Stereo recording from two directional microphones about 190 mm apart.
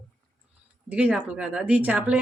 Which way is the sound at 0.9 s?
5° right (ahead or behind).